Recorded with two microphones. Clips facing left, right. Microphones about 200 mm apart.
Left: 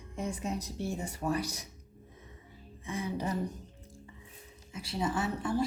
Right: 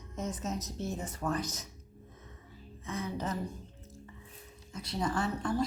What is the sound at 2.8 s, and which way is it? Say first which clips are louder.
Speech: left 2 dB; 15° left (ahead or behind).